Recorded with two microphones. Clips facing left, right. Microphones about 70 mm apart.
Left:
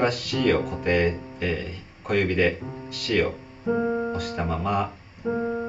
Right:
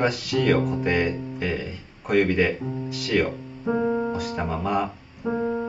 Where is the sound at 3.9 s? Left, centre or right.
Centre.